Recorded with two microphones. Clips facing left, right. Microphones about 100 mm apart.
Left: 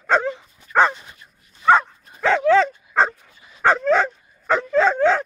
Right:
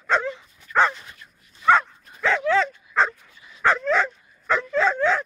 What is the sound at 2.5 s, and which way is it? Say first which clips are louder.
Dog: left 5 dB; 35° left (ahead or behind).